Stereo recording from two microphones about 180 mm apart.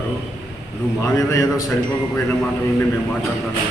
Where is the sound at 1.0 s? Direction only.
15° left (ahead or behind).